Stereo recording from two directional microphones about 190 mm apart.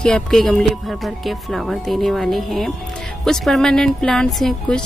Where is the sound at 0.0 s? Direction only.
5° left (ahead or behind).